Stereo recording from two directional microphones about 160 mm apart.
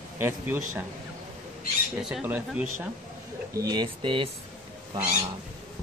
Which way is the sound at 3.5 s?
25° right (ahead or behind).